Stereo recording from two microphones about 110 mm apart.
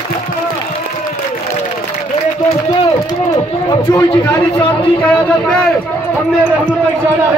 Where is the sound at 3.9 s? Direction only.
40° left (ahead or behind).